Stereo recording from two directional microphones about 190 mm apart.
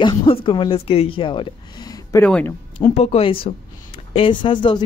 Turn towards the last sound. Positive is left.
turn(degrees=25)  # may be behind; listen again after turning